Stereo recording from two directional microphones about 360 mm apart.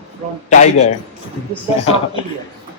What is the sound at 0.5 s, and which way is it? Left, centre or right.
Speech, centre.